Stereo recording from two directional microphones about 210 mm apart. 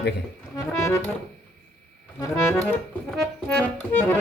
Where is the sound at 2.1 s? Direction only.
10° left (ahead or behind).